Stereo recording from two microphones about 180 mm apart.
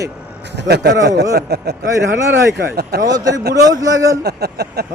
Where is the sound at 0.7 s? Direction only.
70° right (ahead or behind).